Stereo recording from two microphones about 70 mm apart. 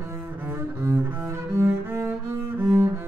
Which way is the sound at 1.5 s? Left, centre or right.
Right.